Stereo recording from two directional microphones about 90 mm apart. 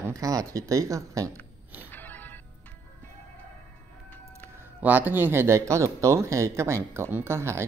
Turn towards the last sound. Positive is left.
turn(degrees=-30)  # may be behind; listen again after turning